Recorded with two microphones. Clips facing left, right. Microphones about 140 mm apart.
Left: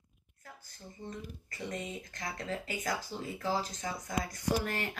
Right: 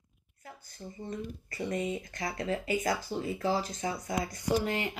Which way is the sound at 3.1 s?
55° right (ahead or behind).